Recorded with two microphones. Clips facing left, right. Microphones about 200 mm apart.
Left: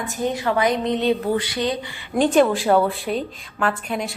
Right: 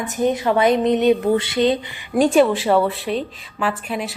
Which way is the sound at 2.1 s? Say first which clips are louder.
Right 2 dB; 5° right (ahead or behind).